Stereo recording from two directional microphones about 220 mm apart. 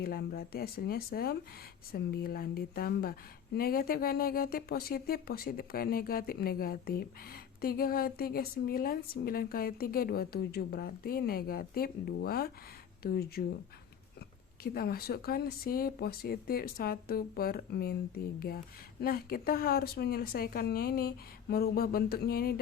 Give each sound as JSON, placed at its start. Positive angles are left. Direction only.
{"t": 0.0, "sound": "speech", "side_deg": 45}
{"t": 14.6, "sound": "speech", "side_deg": 45}